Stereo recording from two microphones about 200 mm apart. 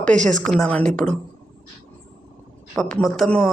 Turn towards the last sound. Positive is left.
turn(degrees=5)  # may be behind; listen again after turning